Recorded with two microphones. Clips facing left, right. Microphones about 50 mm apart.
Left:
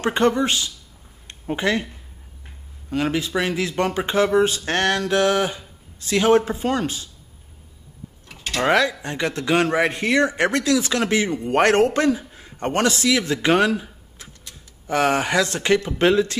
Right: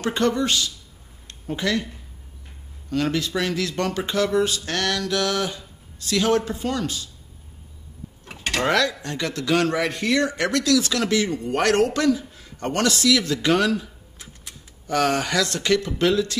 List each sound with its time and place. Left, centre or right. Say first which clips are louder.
0.0 s speech: left 3 dB; left
1.2 s a sound: left 3 dB; left
2.9 s speech: left 1 dB; centre
8.6 s speech: left 4 dB; left